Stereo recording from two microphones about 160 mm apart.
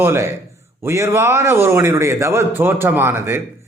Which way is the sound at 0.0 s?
15° right (ahead or behind).